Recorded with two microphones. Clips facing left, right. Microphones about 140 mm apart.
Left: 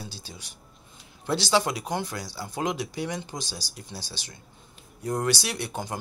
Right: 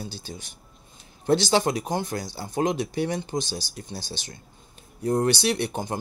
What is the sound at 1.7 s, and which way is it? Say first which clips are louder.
Speech: right 4 dB; 45° right (ahead or behind).